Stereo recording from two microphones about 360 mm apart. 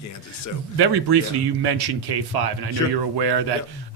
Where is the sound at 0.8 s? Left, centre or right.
Right.